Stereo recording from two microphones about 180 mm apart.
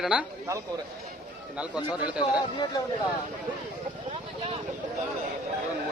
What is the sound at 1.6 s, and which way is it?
Speech, 5° right (ahead or behind).